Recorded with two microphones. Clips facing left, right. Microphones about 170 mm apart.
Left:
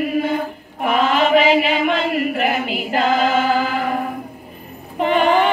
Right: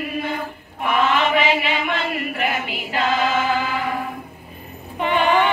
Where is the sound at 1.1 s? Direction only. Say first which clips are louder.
Left 5 dB; 45° left (ahead or behind).